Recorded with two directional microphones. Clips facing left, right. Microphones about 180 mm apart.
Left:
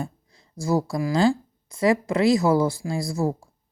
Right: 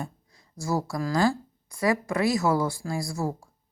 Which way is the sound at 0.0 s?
25° left (ahead or behind).